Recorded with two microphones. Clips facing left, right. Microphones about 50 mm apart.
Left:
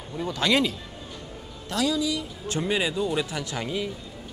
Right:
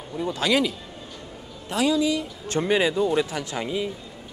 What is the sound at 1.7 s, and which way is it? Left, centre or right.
Speech, right.